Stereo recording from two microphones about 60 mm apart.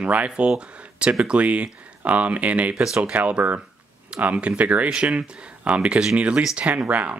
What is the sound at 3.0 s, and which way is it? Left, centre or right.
Speech, right.